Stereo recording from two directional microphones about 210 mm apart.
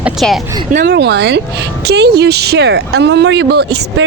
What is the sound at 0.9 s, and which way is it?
Speech, 55° right (ahead or behind).